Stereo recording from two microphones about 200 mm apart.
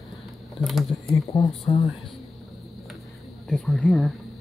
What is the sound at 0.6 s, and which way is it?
Speech, centre (ahead or behind).